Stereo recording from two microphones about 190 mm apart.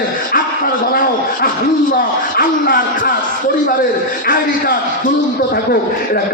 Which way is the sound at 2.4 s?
50° left (ahead or behind).